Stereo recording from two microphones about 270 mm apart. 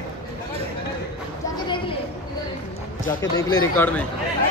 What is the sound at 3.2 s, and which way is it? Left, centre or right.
Speech, centre.